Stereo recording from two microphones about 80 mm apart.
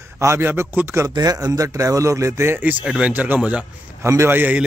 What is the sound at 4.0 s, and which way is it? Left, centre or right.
Speech, right.